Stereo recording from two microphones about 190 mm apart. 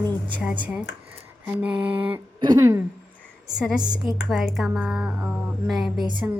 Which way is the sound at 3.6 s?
5° right (ahead or behind).